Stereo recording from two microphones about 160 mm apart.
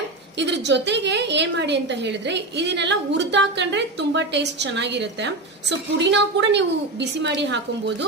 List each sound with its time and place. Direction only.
0.4 s a woman's voice: 90° right